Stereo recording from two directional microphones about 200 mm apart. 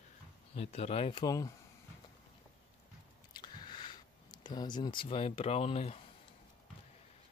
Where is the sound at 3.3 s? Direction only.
20° left (ahead or behind).